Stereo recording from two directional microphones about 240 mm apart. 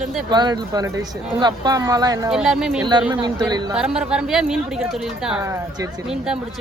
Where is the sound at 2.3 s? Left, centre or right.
Centre.